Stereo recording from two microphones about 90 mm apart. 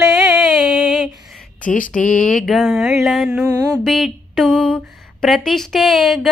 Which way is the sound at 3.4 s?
40° right (ahead or behind).